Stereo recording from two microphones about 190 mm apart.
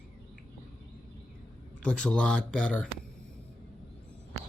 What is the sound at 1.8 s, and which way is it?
Speech, 5° left (ahead or behind).